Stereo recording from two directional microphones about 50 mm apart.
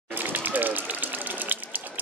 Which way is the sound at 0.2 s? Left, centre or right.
Right.